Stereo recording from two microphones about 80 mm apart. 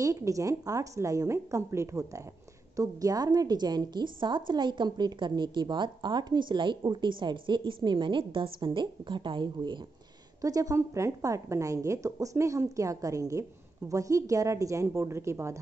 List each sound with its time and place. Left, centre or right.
0.0 s a woman's voice: right
10.4 s a woman's voice: right